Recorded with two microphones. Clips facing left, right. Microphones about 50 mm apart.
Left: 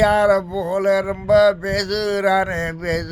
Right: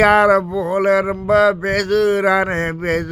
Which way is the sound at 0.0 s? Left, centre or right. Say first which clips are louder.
Right 3 dB; right.